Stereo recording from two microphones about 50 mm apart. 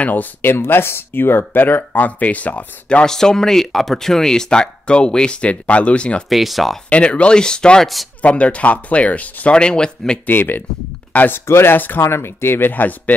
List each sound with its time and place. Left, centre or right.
0.0 s speech: left
3.1 s speech: centre
6.2 s speech: centre
6.9 s speech: left
7.8 s speech: centre
8.2 s speech: left
10.2 s speech: left
11.4 s speech: left
11.7 s speech: left
12.0 s speech: left